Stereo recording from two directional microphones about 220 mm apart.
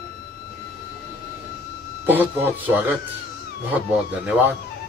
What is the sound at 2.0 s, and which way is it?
Speech, 10° right (ahead or behind).